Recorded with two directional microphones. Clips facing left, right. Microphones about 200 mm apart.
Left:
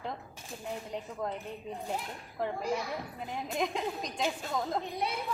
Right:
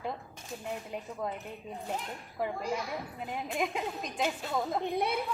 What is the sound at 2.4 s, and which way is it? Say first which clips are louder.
Speech: even; 5° right (ahead or behind).